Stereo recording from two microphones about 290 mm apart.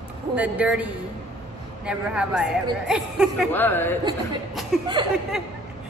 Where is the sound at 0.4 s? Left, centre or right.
Centre.